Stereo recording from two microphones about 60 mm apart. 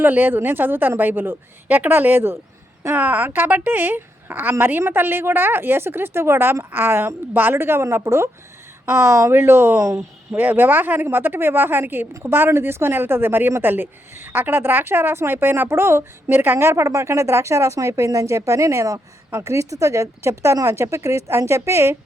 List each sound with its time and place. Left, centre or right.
0.0 s speech: right
8.9 s speech: right
9.3 s speech: right
9.7 s speech: right
10.3 s speech: right
16.6 s speech: right